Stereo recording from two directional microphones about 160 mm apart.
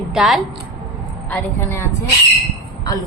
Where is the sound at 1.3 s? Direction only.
15° left (ahead or behind).